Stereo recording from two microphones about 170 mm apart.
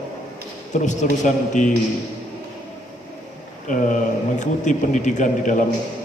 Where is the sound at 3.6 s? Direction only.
50° left (ahead or behind).